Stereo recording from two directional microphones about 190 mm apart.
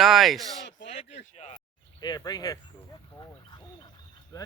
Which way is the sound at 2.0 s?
20° left (ahead or behind).